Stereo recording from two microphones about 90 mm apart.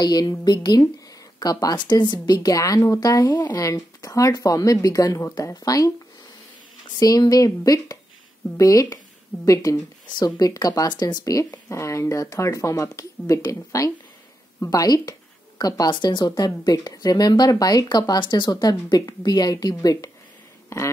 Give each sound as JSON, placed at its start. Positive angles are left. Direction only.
{"t": 0.0, "sound": "speech", "side_deg": 45}
{"t": 7.0, "sound": "speech", "side_deg": 45}
{"t": 11.7, "sound": "speech", "side_deg": 35}